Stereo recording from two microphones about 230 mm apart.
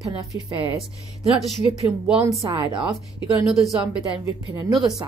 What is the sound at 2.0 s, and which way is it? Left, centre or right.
Speech, centre.